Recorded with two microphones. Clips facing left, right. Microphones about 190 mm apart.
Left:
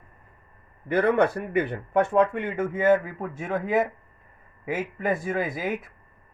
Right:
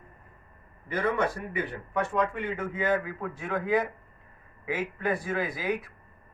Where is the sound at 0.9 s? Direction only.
60° left (ahead or behind).